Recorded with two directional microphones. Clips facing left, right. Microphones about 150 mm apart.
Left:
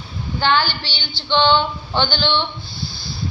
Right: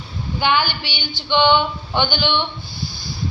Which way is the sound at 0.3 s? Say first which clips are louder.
Left 1 dB; 15° right (ahead or behind).